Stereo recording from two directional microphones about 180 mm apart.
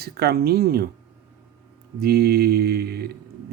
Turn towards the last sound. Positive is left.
turn(degrees=-60)  # may be behind; listen again after turning